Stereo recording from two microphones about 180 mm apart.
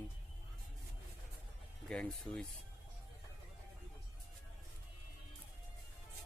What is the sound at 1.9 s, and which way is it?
Speech, 5° left (ahead or behind).